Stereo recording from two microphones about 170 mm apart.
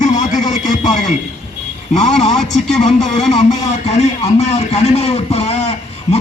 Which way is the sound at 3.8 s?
40° left (ahead or behind).